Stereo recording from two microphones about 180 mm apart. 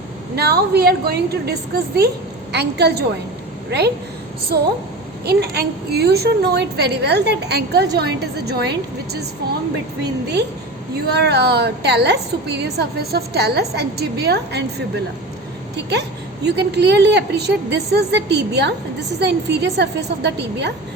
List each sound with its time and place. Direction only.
0.3 s a woman's voice: 65° right (ahead or behind)
5.2 s a woman's voice: 65° right (ahead or behind)
10.0 s a woman's voice: 65° right (ahead or behind)